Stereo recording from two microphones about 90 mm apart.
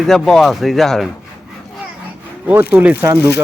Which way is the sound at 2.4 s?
15° right (ahead or behind).